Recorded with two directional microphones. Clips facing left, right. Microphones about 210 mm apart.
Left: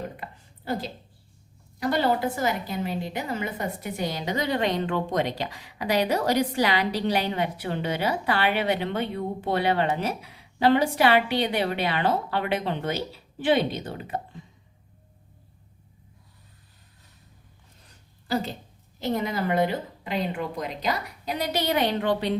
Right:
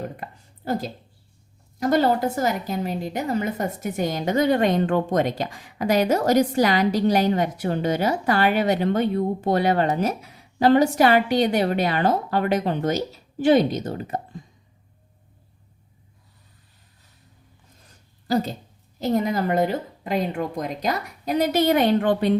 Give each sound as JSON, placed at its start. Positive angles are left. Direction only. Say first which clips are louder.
{"t": 0.2, "sound": "a sound", "louder": "right 3 dB", "side_deg": -45}
{"t": 1.8, "sound": "a woman's voice", "louder": "right 4 dB", "side_deg": -45}
{"t": 18.3, "sound": "a woman's voice", "louder": "right 5 dB", "side_deg": -40}